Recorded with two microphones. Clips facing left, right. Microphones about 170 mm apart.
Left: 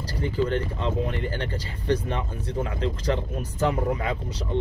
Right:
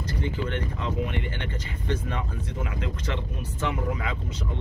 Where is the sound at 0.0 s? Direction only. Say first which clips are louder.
Left 4 dB; 35° left (ahead or behind).